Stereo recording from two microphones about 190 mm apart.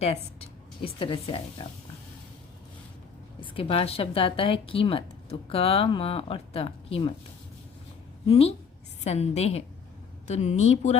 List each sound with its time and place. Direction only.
0.0 s a woman's voice: 30° left (ahead or behind)
3.4 s a woman's voice: 30° left (ahead or behind)
8.3 s speech: 30° left (ahead or behind)